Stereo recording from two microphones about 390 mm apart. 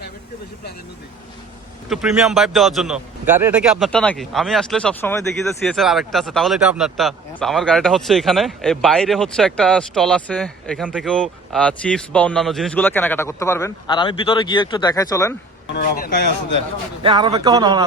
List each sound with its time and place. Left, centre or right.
1.9 s speech: centre
15.7 s speech: left
17.0 s speech: centre